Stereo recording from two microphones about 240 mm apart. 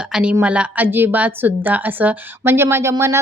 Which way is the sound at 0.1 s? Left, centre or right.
Centre.